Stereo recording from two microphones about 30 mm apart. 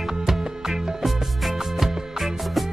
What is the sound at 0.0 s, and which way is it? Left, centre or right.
Music, centre.